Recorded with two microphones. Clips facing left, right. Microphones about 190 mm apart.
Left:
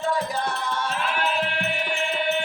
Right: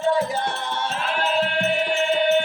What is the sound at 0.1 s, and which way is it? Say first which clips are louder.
Music: right 5 dB; 25° right (ahead or behind).